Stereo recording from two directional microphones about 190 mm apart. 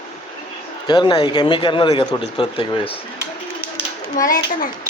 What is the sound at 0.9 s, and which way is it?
Speech, 20° left (ahead or behind).